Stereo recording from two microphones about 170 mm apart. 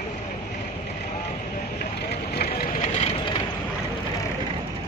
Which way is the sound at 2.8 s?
40° left (ahead or behind).